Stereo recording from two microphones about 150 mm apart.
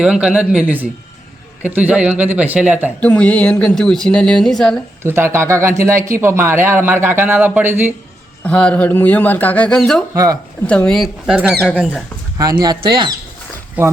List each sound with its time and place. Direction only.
0.0 s speech: 5° right (ahead or behind)
3.0 s speech: 10° left (ahead or behind)
5.0 s speech: 15° right (ahead or behind)
8.4 s speech: 10° left (ahead or behind)
12.4 s speech: 25° right (ahead or behind)
13.8 s speech: 10° right (ahead or behind)